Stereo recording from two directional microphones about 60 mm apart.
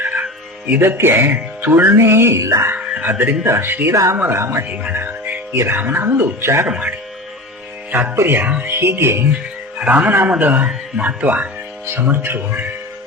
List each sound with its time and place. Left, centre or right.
0.0 s music: right
0.8 s speech: right
2.4 s speech: right
2.7 s speech: right
3.9 s speech: right
4.2 s speech: right
4.7 s music: right
5.7 s speech: right
6.7 s speech: right
8.1 s speech: right
9.7 s a man's voice: right